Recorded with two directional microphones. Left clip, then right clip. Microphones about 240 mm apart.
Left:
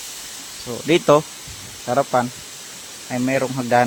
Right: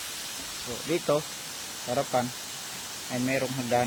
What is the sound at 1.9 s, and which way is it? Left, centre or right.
Speech, left.